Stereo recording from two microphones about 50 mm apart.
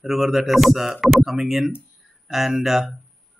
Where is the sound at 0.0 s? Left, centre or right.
Centre.